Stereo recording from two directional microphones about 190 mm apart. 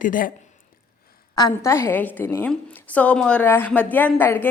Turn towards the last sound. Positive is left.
turn(degrees=10)  # may be behind; listen again after turning